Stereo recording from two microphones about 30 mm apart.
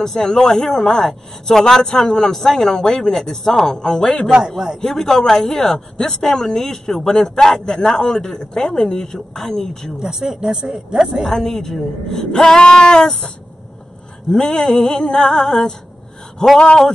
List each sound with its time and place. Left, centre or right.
0.0 s a man's voice: centre
7.1 s speech: left
7.3 s a man's voice: centre
7.6 s speech: left
9.9 s speech: right
11.2 s a man's voice: centre
14.3 s a man's voice: centre
16.5 s speech: left